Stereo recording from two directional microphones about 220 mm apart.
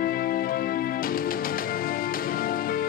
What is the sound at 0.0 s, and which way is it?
Music, 40° left (ahead or behind).